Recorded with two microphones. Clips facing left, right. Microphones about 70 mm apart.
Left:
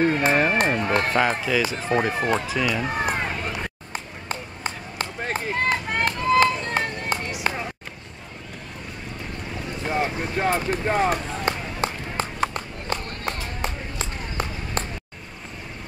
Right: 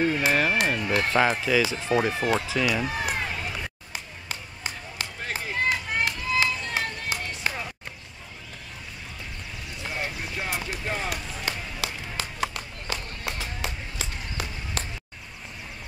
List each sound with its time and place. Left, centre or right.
0.0 s speech: left
1.5 s speech: centre
2.0 s speech: left
2.5 s speech: centre
2.9 s run: left
9.7 s run: left
12.9 s a sound: left